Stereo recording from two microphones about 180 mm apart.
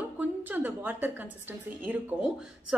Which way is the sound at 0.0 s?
10° right (ahead or behind).